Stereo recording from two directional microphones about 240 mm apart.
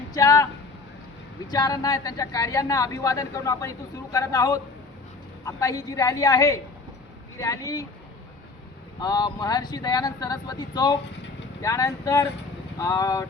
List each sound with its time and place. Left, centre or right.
0.1 s a sound: centre
1.5 s speech: centre
9.0 s speech: centre